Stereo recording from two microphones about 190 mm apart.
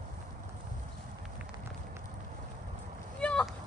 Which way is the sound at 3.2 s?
5° left (ahead or behind).